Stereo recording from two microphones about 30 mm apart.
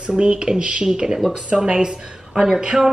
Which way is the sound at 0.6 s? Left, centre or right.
Right.